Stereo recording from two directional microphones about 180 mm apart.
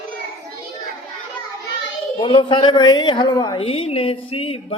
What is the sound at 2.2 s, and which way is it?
A woman's voice, 30° left (ahead or behind).